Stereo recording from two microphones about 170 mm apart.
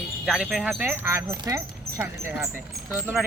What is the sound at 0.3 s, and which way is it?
Speech, centre (ahead or behind).